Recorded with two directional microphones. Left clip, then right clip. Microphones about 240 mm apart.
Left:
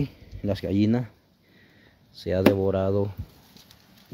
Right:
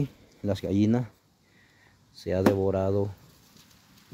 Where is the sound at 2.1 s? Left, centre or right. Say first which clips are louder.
Left 3 dB; centre.